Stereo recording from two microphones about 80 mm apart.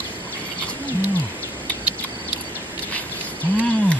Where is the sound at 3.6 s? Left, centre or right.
Centre.